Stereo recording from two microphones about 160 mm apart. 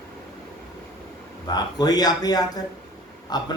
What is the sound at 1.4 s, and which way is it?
A woman's voice, 25° left (ahead or behind).